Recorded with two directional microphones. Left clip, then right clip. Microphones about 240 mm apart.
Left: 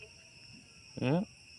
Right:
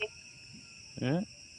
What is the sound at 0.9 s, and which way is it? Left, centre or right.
Speech, centre.